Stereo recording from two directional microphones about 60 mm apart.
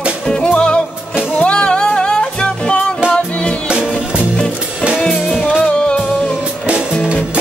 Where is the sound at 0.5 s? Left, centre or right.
Centre.